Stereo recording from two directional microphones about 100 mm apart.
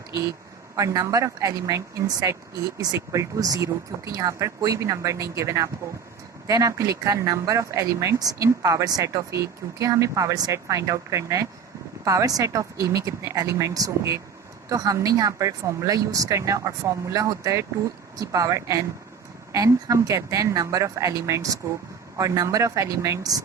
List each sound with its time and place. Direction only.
0.8 s speech: 35° right (ahead or behind)